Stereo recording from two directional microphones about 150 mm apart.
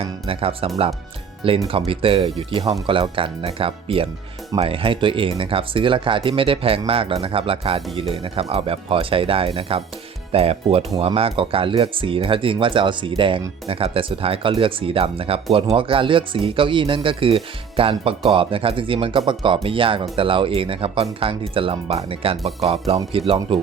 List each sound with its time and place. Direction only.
0.0 s speech: 40° right (ahead or behind)